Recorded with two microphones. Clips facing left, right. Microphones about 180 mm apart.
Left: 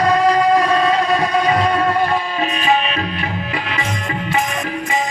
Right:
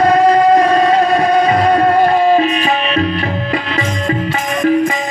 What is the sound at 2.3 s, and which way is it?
Music, 40° right (ahead or behind).